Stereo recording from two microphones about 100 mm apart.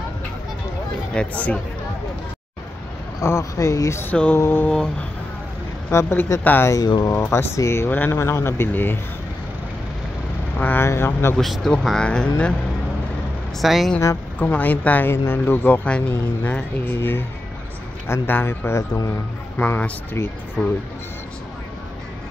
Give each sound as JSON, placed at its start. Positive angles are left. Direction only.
{"t": 1.1, "sound": "speech", "side_deg": 15}
{"t": 3.2, "sound": "speech", "side_deg": 30}
{"t": 4.0, "sound": "speech", "side_deg": 15}
{"t": 5.9, "sound": "speech", "side_deg": 25}
{"t": 10.6, "sound": "speech", "side_deg": 15}
{"t": 11.3, "sound": "speech", "side_deg": 0}
{"t": 13.6, "sound": "speech", "side_deg": 0}
{"t": 14.4, "sound": "speech", "side_deg": 15}